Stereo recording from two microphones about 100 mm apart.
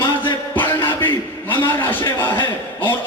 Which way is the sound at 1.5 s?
20° left (ahead or behind).